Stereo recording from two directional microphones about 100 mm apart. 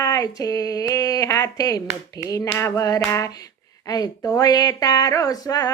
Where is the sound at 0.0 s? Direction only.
35° left (ahead or behind).